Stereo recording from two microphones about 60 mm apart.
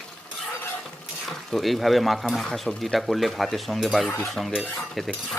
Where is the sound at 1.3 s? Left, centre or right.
Centre.